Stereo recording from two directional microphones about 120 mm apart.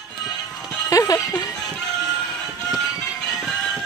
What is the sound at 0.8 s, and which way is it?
Speech, 30° left (ahead or behind).